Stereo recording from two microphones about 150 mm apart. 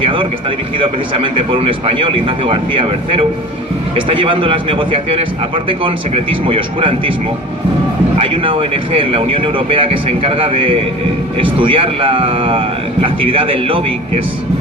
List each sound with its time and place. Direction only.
0.0 s speech: 35° right (ahead or behind)
8.2 s speech: 35° right (ahead or behind)